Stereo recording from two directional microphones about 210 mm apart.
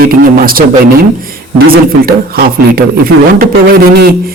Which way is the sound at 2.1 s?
45° right (ahead or behind).